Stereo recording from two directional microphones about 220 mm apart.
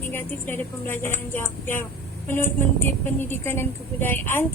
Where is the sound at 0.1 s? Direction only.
10° left (ahead or behind).